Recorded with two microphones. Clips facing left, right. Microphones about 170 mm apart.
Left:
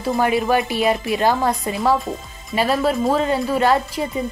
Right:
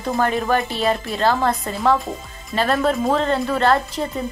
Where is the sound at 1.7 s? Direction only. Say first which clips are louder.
Even; centre (ahead or behind).